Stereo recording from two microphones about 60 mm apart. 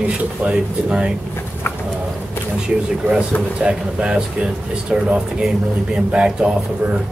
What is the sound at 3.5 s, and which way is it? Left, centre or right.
Speech, centre.